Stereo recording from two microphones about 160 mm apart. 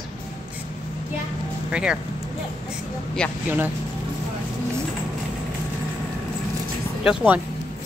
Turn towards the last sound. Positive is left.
turn(degrees=-5)  # may be behind; listen again after turning